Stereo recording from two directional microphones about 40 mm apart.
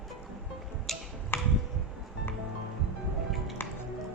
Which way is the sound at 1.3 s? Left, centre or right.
Left.